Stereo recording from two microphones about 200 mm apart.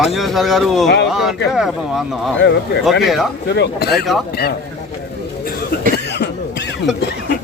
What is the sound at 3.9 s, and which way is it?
Speech, centre (ahead or behind).